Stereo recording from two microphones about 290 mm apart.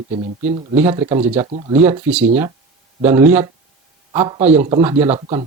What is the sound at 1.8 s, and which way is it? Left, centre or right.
A man's voice, centre.